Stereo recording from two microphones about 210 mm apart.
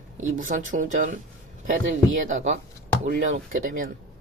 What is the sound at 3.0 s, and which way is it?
Speech, 40° right (ahead or behind).